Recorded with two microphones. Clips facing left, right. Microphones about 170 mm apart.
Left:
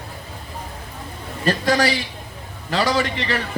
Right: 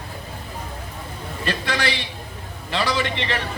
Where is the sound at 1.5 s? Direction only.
40° left (ahead or behind).